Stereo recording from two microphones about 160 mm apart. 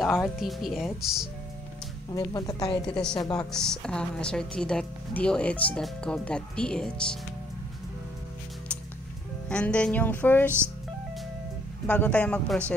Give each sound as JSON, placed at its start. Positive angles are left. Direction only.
{"t": 0.4, "sound": "speech", "side_deg": 0}
{"t": 2.0, "sound": "speech", "side_deg": 20}
{"t": 2.9, "sound": "speech", "side_deg": 5}
{"t": 3.2, "sound": "speech", "side_deg": 25}
{"t": 3.5, "sound": "speech", "side_deg": 5}
{"t": 9.5, "sound": "music", "side_deg": 5}
{"t": 11.9, "sound": "music", "side_deg": 10}